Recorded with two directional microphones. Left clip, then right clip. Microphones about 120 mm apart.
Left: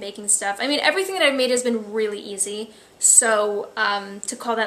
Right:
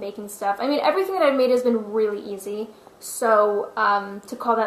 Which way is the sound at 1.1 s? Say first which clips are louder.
Even; 35° left (ahead or behind).